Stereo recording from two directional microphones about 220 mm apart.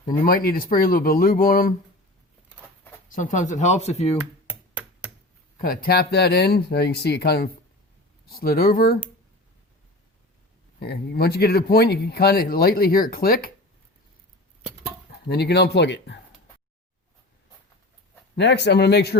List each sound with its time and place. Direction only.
0.3 s speech: 40° left (ahead or behind)
3.1 s speech: 35° left (ahead or behind)
5.5 s speech: 40° left (ahead or behind)
10.8 s speech: 45° left (ahead or behind)
15.3 s speech: 50° left (ahead or behind)
18.3 s speech: 50° left (ahead or behind)